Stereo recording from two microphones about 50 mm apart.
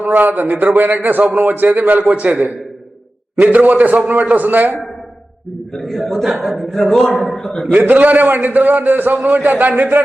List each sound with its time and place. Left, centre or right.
0.0 s a man's voice: right
5.7 s a man's voice: centre
7.7 s a man's voice: right